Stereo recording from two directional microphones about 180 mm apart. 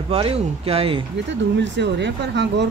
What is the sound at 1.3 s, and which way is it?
Speech, 80° right.